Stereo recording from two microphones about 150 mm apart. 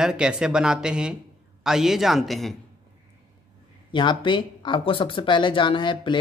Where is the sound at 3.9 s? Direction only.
30° left (ahead or behind).